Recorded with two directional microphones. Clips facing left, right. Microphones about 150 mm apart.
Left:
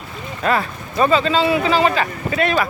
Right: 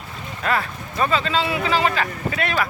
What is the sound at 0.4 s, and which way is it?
A man's voice, 25° left (ahead or behind).